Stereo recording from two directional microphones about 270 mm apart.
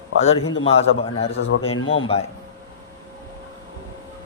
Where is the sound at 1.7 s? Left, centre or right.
Left.